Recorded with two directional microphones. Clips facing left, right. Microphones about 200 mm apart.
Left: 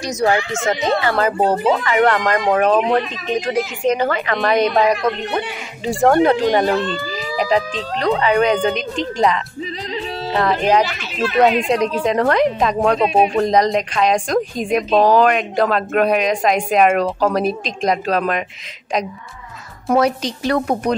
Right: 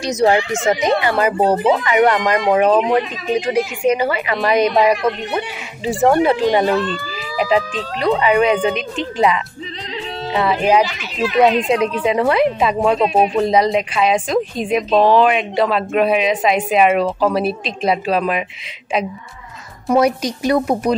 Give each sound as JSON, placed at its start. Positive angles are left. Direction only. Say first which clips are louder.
{"t": 0.0, "sound": "a woman's voice", "louder": "right 3 dB", "side_deg": -25}
{"t": 11.4, "sound": "a woman's voice", "louder": "right 1 dB", "side_deg": 0}
{"t": 20.0, "sound": "speech", "louder": "right 3 dB", "side_deg": -10}